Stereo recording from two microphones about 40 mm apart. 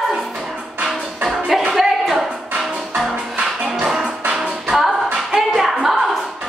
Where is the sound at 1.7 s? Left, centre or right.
Centre.